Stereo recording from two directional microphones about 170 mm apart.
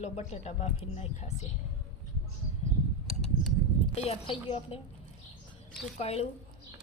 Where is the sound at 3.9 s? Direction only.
40° left (ahead or behind).